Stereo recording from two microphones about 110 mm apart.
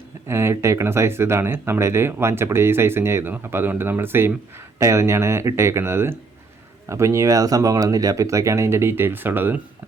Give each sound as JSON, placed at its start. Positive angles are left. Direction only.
{"t": 0.3, "sound": "speech", "side_deg": -25}